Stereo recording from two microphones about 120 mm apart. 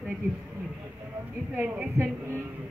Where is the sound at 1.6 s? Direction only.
15° right (ahead or behind).